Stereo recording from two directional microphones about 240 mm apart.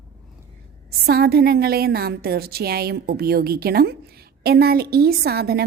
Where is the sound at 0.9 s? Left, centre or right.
Right.